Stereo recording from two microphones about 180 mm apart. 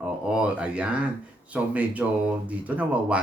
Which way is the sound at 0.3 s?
5° right (ahead or behind).